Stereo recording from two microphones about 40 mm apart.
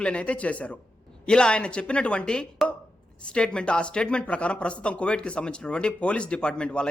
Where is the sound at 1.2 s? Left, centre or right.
Left.